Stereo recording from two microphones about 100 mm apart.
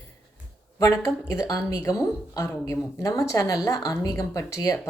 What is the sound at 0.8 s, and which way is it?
Speech, 35° left (ahead or behind).